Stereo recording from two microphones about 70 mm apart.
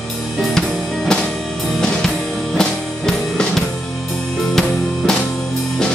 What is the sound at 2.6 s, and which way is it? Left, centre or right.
Music, centre.